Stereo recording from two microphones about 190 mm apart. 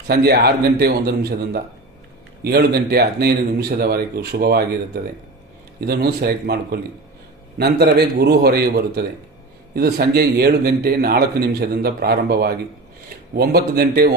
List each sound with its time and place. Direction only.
0.1 s a man's voice: 55° right (ahead or behind)
5.8 s a man's voice: 55° right (ahead or behind)